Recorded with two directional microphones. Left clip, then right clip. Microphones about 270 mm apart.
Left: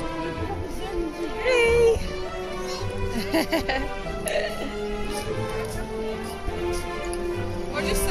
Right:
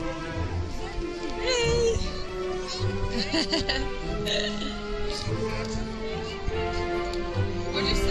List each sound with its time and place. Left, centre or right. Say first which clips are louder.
1.4 s music: left 6 dB; centre
3.2 s speech: left 3 dB; centre
7.7 s music: left 1 dB; left